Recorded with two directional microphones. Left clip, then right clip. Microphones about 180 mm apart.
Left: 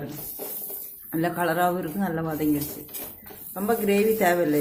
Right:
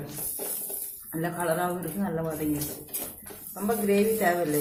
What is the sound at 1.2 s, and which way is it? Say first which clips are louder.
A man's voice: left 4 dB; 55° left (ahead or behind).